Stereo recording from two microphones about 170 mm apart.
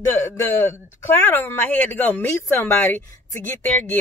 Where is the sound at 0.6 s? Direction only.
15° left (ahead or behind).